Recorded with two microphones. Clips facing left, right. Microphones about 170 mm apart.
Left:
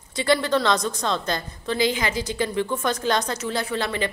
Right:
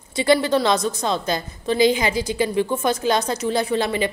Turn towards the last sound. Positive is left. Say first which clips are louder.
# right 5 dB
turn(degrees=-15)  # may be behind; listen again after turning